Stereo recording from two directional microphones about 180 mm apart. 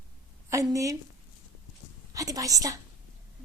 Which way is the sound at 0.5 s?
20° right (ahead or behind).